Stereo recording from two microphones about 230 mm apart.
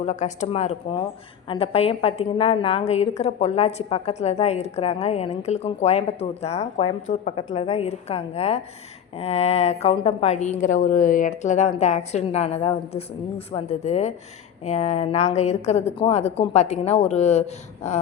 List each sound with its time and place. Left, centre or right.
0.0 s a woman's voice: left